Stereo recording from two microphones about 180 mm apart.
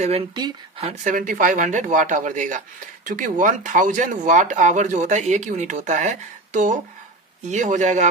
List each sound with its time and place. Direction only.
0.0 s speech: 35° right (ahead or behind)
0.8 s speech: 45° right (ahead or behind)